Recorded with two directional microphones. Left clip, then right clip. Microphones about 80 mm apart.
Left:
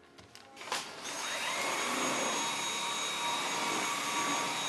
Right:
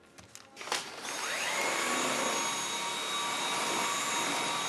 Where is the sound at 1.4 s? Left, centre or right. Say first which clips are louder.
Right 2 dB; right.